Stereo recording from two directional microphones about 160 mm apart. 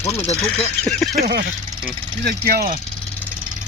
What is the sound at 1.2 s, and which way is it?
Speech, 80° right.